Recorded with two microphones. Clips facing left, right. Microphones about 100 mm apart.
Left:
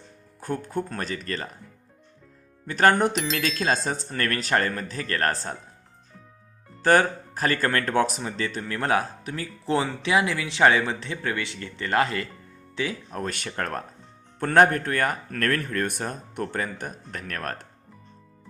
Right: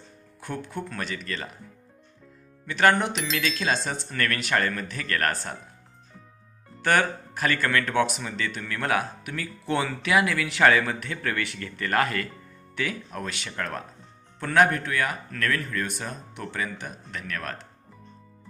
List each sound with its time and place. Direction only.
0.3 s speech: 40° left (ahead or behind)
2.6 s speech: 40° left (ahead or behind)
6.8 s speech: 35° left (ahead or behind)
13.2 s speech: 45° left (ahead or behind)